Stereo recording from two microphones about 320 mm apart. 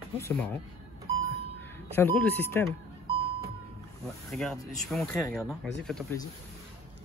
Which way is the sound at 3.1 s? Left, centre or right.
Centre.